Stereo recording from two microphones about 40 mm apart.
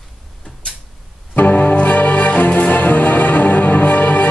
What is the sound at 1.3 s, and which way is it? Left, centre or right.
Music, left.